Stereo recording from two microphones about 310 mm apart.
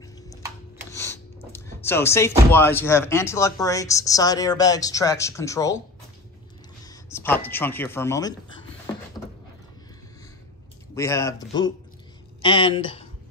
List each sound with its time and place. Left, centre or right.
0.9 s speech: centre
6.8 s speech: centre
11.0 s speech: centre